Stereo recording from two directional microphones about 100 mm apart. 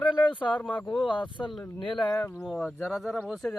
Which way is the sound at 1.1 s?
50° left (ahead or behind).